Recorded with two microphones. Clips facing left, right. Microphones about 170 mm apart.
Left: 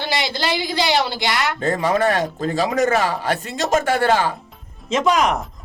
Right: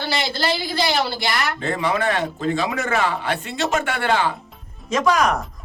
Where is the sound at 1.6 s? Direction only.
45° left (ahead or behind).